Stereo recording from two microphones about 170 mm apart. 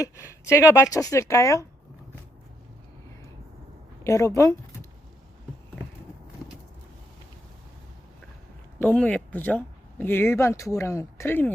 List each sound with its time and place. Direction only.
0.0 s speech: 15° left (ahead or behind)
4.0 s speech: 20° left (ahead or behind)
8.8 s speech: 10° left (ahead or behind)